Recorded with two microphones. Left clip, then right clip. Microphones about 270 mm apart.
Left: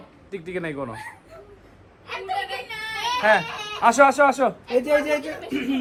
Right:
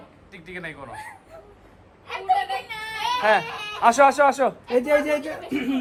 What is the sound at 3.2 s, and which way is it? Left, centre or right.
Speech, right.